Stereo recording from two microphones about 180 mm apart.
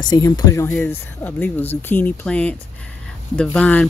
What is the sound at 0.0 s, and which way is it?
Speech, 20° left (ahead or behind).